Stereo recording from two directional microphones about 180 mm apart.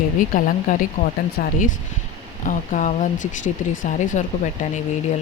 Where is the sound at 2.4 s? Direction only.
45° left (ahead or behind).